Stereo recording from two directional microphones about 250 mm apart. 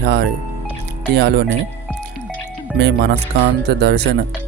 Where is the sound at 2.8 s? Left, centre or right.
Right.